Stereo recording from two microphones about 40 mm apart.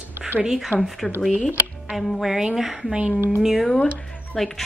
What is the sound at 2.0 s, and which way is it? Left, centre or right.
A woman's voice, centre.